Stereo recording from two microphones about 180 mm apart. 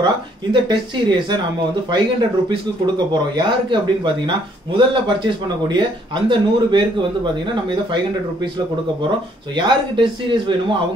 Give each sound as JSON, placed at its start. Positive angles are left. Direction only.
{"t": 0.0, "sound": "speech", "side_deg": -25}
{"t": 3.1, "sound": "speech", "side_deg": -25}
{"t": 9.6, "sound": "speech", "side_deg": -25}